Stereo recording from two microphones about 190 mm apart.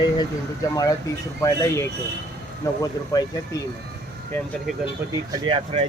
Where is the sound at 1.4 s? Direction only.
15° left (ahead or behind).